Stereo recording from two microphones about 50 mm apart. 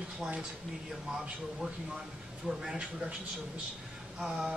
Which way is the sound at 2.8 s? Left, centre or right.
Right.